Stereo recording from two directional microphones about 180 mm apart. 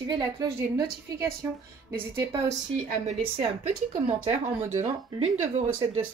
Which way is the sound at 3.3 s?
35° right (ahead or behind).